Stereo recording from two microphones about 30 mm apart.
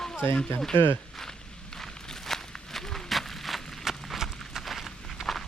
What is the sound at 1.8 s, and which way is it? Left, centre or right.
Walk, centre.